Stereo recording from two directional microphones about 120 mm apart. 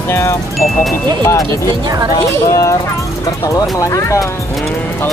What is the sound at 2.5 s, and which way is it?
Speech, 25° left (ahead or behind).